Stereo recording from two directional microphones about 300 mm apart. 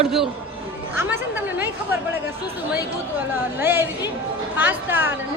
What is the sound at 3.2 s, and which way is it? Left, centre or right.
A woman's voice, centre.